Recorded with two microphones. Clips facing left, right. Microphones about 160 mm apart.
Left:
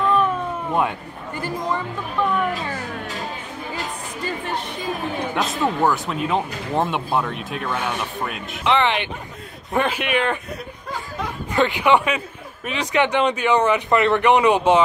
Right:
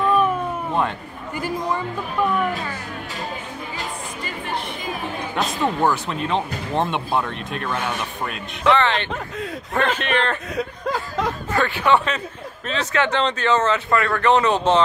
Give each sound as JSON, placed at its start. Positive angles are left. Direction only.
{"t": 0.0, "sound": "cat", "side_deg": -10}
{"t": 5.3, "sound": "speech", "side_deg": 0}
{"t": 8.6, "sound": "speech", "side_deg": 15}
{"t": 11.5, "sound": "speech", "side_deg": 15}